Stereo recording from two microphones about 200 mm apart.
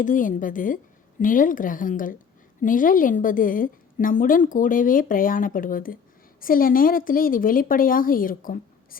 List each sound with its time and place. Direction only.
0.0 s a woman's voice: 40° left (ahead or behind)